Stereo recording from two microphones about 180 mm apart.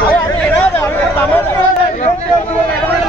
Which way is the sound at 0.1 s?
10° left (ahead or behind).